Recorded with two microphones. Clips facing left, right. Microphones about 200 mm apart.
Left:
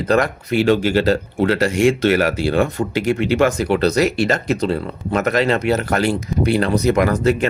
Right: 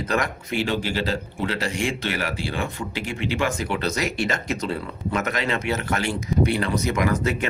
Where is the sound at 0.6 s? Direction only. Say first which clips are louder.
Left 12 dB; 45° left (ahead or behind).